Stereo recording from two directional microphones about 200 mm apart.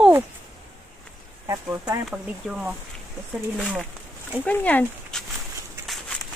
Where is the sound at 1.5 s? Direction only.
15° right (ahead or behind).